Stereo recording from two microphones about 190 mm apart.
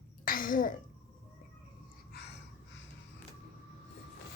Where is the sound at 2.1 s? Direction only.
60° left (ahead or behind).